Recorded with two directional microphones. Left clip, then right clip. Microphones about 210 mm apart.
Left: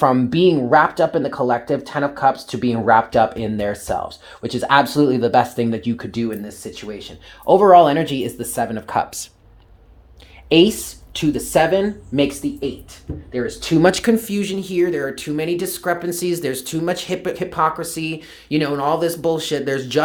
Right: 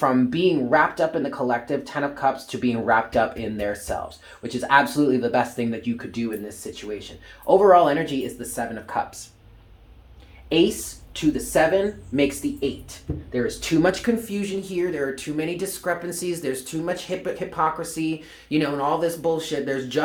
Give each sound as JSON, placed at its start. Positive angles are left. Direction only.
{"t": 0.0, "sound": "speech", "side_deg": 45}
{"t": 10.5, "sound": "speech", "side_deg": 55}
{"t": 13.8, "sound": "speech", "side_deg": 50}